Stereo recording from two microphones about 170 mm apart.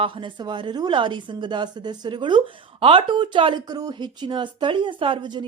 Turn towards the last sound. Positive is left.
turn(degrees=-25)  # may be behind; listen again after turning